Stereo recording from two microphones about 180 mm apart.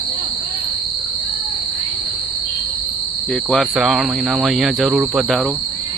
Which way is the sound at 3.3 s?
5° left (ahead or behind).